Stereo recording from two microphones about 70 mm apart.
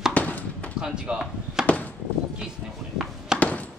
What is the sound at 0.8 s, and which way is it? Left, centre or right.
Speech, centre.